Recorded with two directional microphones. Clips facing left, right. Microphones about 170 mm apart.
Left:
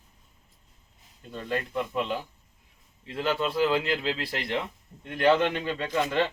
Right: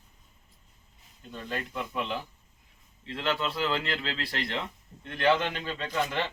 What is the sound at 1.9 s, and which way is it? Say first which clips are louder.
Speech: left 3 dB; 15° left (ahead or behind).